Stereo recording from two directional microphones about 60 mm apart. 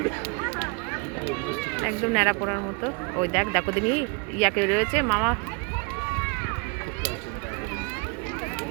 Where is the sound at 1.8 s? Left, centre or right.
Centre.